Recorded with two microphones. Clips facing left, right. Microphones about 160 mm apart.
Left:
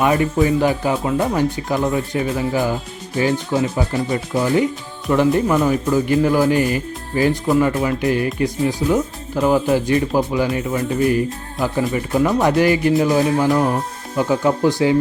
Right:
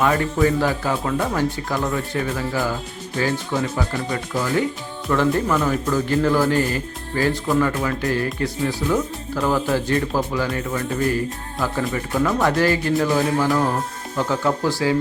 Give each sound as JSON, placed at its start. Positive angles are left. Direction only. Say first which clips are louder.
{"t": 0.0, "sound": "speech", "louder": "left 2 dB", "side_deg": 15}